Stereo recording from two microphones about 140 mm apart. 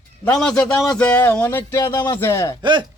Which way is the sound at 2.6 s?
35° right (ahead or behind).